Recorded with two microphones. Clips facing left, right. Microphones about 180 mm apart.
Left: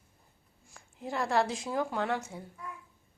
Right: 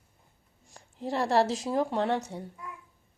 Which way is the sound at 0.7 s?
35° right (ahead or behind).